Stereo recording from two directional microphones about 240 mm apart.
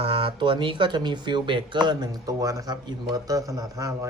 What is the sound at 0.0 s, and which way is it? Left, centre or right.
Speech, right.